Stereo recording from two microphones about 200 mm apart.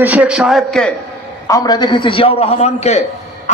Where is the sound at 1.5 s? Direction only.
20° left (ahead or behind).